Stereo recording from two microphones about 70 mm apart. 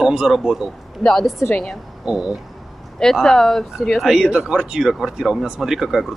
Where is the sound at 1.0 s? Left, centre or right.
Centre.